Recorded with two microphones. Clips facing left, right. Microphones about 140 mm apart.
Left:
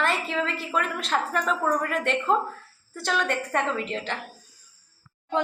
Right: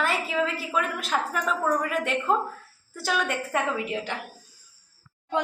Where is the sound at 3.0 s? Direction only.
5° right (ahead or behind).